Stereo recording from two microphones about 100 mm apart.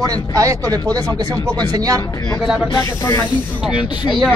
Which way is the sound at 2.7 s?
30° left (ahead or behind).